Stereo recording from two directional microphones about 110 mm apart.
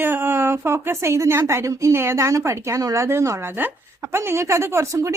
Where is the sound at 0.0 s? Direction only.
20° right (ahead or behind).